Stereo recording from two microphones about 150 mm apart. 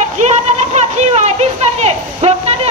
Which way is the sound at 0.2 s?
50° right (ahead or behind).